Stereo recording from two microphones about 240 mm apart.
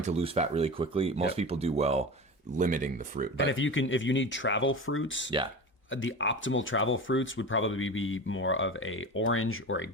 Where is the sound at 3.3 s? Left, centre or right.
Left.